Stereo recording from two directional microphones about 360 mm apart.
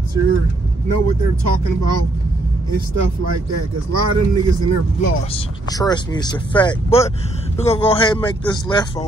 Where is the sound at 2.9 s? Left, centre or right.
Right.